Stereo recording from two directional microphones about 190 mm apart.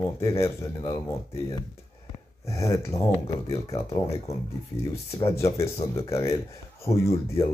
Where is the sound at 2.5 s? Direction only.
15° left (ahead or behind).